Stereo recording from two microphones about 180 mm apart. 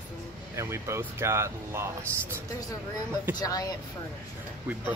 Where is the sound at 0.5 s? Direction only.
15° right (ahead or behind).